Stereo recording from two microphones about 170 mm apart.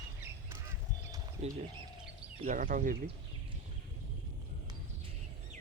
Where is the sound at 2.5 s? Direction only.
50° right (ahead or behind).